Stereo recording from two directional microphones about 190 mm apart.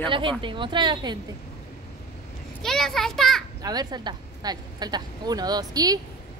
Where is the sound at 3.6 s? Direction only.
20° right (ahead or behind).